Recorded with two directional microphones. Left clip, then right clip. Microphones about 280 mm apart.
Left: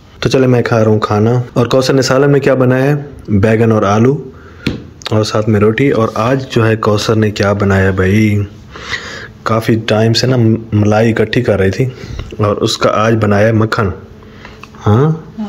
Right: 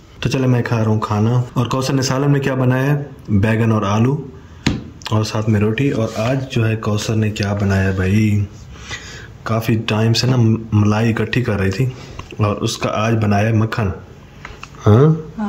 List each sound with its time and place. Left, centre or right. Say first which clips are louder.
0.2 s speech: left 9 dB; centre